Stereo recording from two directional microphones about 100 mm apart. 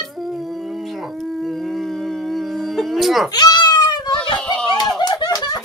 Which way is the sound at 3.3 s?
45° left (ahead or behind).